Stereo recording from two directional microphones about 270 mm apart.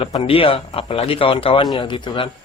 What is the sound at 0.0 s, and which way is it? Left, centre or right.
A man's voice, left.